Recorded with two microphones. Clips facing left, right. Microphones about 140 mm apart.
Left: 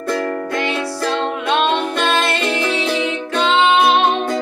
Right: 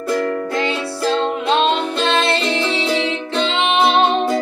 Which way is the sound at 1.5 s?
25° right (ahead or behind).